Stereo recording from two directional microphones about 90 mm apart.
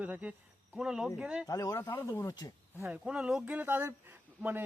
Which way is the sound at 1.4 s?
40° left (ahead or behind).